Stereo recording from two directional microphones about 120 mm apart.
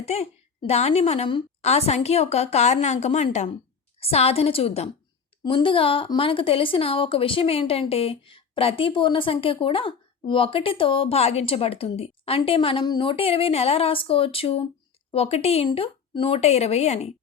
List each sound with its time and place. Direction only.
0.0 s a woman's voice: 60° left (ahead or behind)
5.5 s speech: 45° left (ahead or behind); by 17.1 s 60° left (ahead or behind)